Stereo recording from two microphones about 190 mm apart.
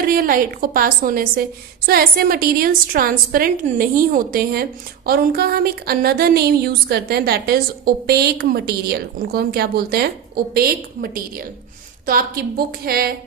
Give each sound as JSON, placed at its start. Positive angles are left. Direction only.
{"t": 0.0, "sound": "a woman's voice", "side_deg": -50}